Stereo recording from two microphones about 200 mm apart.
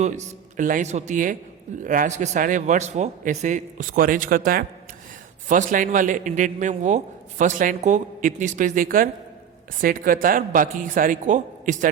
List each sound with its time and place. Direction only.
0.0 s a man's voice: 35° right (ahead or behind)